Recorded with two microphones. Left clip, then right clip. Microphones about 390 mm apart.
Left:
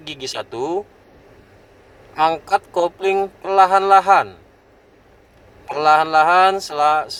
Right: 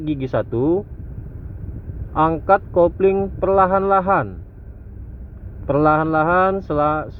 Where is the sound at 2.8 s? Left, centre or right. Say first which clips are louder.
Right 2 dB; centre.